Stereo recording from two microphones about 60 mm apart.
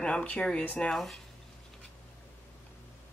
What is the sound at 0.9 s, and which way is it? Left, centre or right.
Speech, centre.